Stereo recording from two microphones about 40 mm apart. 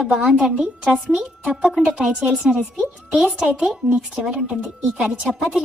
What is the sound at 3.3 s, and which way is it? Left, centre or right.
A woman's voice, centre.